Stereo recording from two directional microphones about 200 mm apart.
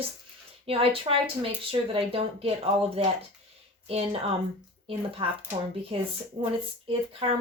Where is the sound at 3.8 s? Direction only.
30° right (ahead or behind).